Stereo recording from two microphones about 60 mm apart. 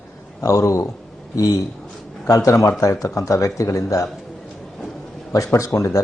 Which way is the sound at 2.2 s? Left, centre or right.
Left.